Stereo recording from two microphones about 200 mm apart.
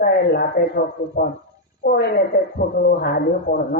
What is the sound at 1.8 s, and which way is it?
A woman's voice, 50° left (ahead or behind).